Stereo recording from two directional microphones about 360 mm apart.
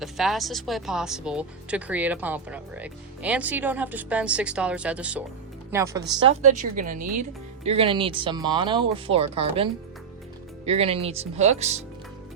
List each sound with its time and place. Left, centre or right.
0.0 s speech: centre
10.7 s speech: centre